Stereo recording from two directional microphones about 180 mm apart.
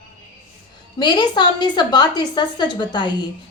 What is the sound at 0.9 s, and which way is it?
A woman's voice, 25° left (ahead or behind).